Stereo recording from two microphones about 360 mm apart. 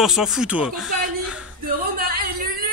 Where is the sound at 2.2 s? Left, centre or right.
Right.